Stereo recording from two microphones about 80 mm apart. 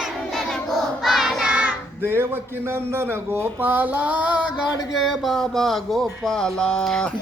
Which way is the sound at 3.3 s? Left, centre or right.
Right.